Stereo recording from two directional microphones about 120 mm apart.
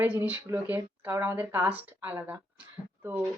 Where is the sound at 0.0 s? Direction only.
15° right (ahead or behind).